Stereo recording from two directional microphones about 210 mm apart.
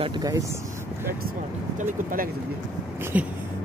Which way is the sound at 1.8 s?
40° right (ahead or behind).